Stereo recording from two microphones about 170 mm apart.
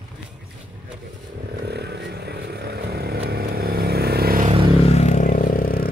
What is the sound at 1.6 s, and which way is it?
Vehicle, 75° right (ahead or behind).